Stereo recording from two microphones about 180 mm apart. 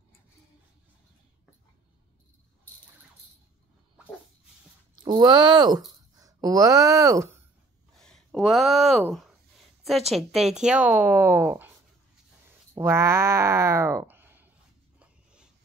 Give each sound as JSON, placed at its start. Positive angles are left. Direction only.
{"t": 5.0, "sound": "speech", "side_deg": -25}
{"t": 8.0, "sound": "speech", "side_deg": 0}
{"t": 10.1, "sound": "a woman's voice", "side_deg": 0}
{"t": 12.7, "sound": "speech", "side_deg": -15}